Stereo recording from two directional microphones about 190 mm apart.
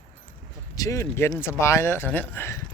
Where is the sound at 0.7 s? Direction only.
15° left (ahead or behind).